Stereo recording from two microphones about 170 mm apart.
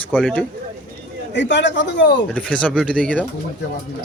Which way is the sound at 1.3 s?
90° left.